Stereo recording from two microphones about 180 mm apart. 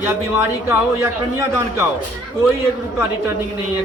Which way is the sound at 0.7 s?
15° right (ahead or behind).